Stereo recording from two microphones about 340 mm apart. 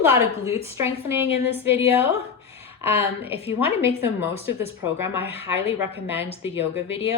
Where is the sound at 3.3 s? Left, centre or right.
Centre.